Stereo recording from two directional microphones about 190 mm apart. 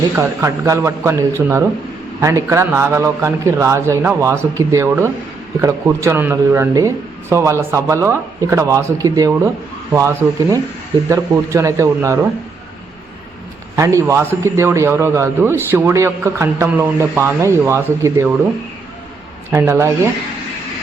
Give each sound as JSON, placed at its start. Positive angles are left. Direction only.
{"t": 0.2, "sound": "a man's voice", "side_deg": -15}
{"t": 13.7, "sound": "a man's voice", "side_deg": -15}
{"t": 19.5, "sound": "a man's voice", "side_deg": -10}